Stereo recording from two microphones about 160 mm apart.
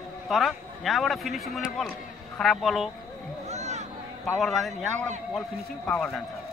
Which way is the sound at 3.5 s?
45° right (ahead or behind).